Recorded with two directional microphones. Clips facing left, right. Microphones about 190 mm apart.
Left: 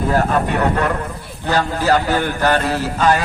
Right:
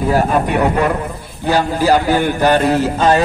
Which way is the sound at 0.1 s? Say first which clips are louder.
Right 3 dB; 15° right (ahead or behind).